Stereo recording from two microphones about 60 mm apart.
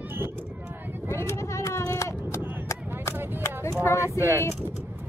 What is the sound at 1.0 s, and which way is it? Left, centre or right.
Vehicle, left.